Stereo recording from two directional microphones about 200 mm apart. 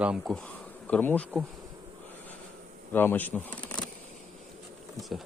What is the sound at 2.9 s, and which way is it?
Speech, 10° left (ahead or behind).